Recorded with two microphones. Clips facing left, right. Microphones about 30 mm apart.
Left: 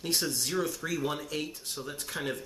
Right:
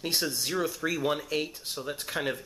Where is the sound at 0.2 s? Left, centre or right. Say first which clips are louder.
Right 1 dB; centre.